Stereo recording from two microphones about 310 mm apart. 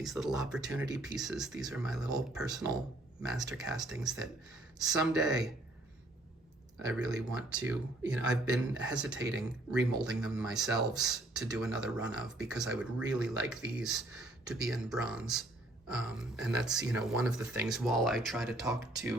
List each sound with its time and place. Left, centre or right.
0.0 s speech: centre
3.2 s speech: centre
6.7 s speech: centre